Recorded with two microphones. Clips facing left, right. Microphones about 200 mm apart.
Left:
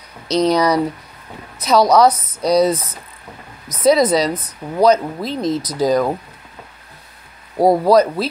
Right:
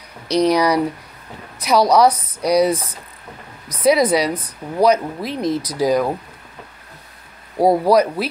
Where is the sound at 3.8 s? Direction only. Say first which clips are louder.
Left 1 dB; 10° right (ahead or behind).